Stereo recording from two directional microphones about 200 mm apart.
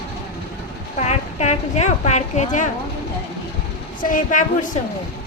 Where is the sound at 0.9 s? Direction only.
35° left (ahead or behind).